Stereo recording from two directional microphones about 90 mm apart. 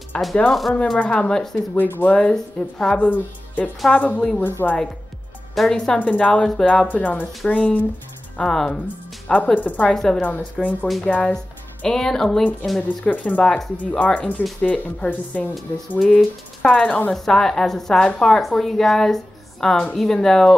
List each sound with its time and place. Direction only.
0.1 s a woman's voice: 10° left (ahead or behind)
0.9 s speech: 15° left (ahead or behind)
1.8 s speech: 20° left (ahead or behind)
2.1 s speech: 10° left (ahead or behind)
3.1 s speech: 15° left (ahead or behind)
5.5 s speech: 5° left (ahead or behind)
9.9 s speech: 5° left (ahead or behind)
10.2 s speech: 20° left (ahead or behind)
12.8 s a woman's voice: 15° left (ahead or behind)